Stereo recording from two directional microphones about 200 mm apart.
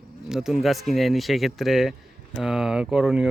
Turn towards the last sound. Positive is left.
turn(degrees=-5)  # may be behind; listen again after turning